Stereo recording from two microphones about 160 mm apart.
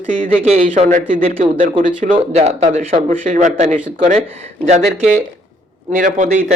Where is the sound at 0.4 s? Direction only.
45° right (ahead or behind).